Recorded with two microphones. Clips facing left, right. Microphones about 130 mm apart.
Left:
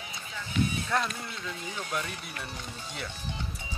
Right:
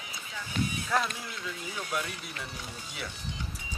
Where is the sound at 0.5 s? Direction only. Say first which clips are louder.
Left 3 dB; 40° right (ahead or behind).